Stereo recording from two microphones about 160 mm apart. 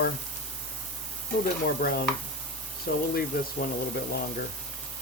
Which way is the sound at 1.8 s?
65° left (ahead or behind).